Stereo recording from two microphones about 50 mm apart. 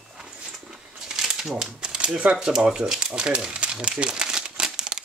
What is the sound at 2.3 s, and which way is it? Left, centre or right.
Speech, centre.